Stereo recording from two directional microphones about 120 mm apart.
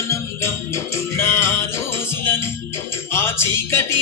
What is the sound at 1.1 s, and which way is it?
Music, 20° left (ahead or behind).